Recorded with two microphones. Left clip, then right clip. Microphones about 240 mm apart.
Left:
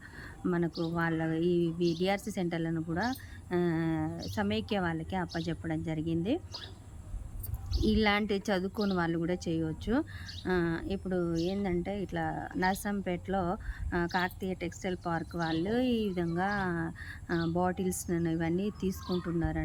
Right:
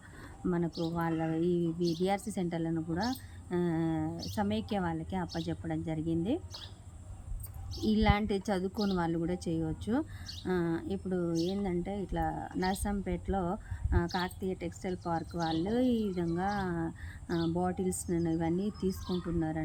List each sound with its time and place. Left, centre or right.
0.4 s speech: centre
7.9 s speech: centre